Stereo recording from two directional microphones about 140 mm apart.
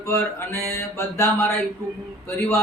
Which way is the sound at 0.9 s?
20° left (ahead or behind).